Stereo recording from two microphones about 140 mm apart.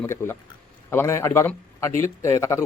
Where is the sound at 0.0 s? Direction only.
20° left (ahead or behind).